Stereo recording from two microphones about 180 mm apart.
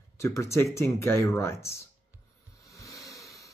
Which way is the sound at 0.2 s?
15° left (ahead or behind).